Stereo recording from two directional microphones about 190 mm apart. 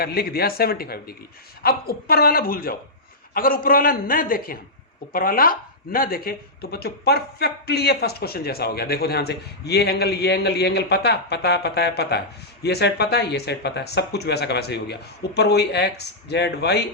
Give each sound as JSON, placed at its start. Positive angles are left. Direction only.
{"t": 0.0, "sound": "a man's voice", "side_deg": 55}